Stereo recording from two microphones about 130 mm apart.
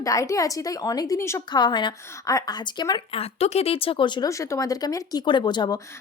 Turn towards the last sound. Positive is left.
turn(degrees=35)  # may be behind; listen again after turning